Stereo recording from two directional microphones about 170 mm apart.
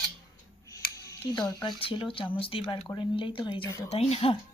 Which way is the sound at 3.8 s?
35° left (ahead or behind).